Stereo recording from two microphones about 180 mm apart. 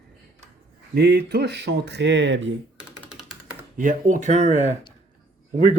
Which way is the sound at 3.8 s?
45° right (ahead or behind).